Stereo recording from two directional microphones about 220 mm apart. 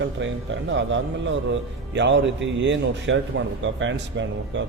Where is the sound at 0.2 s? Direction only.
55° right (ahead or behind).